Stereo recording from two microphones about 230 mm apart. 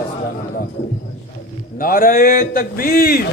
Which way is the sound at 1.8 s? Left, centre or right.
Left.